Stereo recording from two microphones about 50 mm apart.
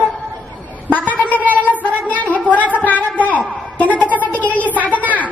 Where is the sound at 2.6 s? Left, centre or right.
Right.